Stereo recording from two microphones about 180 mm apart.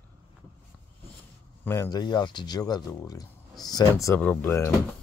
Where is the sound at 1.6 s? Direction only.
15° left (ahead or behind).